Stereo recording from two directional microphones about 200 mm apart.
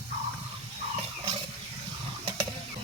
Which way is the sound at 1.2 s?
30° right (ahead or behind).